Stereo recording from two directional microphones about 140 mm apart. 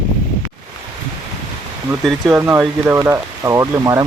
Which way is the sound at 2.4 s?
20° right (ahead or behind).